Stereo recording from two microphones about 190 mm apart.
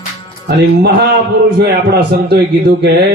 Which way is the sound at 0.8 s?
60° right (ahead or behind).